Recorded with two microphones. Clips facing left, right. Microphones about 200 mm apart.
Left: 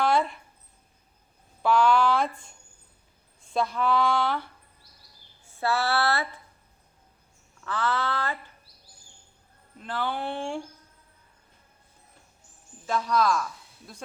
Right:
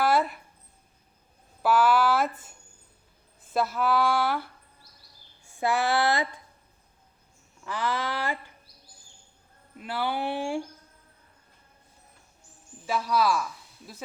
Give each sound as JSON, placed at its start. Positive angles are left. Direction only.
{"t": 0.0, "sound": "a sound", "side_deg": -5}
{"t": 1.6, "sound": "speech", "side_deg": -5}
{"t": 5.5, "sound": "speech", "side_deg": -15}
{"t": 7.6, "sound": "speech", "side_deg": -10}
{"t": 9.7, "sound": "speech", "side_deg": -10}
{"t": 12.8, "sound": "speech", "side_deg": -5}